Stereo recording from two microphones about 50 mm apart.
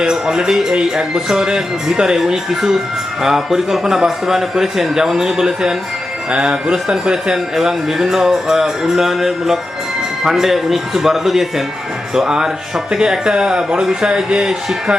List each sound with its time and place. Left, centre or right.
0.0 s speech: centre